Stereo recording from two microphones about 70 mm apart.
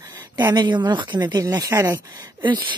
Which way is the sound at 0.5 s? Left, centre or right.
Right.